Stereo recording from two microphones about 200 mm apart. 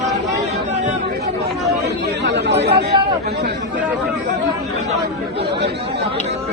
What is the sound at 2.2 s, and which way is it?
Speech, 60° right (ahead or behind).